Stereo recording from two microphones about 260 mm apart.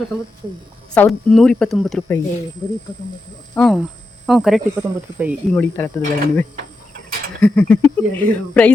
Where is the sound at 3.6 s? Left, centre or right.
Centre.